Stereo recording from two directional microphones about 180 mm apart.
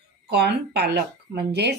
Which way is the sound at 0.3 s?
65° right (ahead or behind).